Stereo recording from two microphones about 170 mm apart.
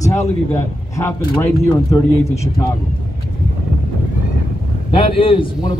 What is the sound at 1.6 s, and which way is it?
Speech, 15° left (ahead or behind).